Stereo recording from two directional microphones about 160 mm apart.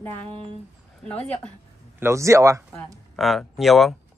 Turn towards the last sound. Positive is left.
turn(degrees=0)  # may be behind; listen again after turning